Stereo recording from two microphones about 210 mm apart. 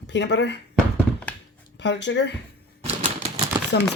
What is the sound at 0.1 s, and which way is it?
Speech, 55° left (ahead or behind).